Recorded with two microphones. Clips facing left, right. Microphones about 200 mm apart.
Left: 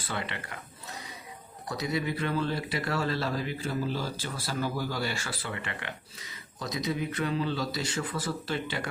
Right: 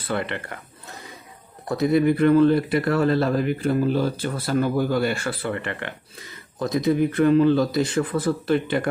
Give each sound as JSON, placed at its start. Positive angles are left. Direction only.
{"t": 0.0, "sound": "speech", "side_deg": -55}
{"t": 1.6, "sound": "speech", "side_deg": -55}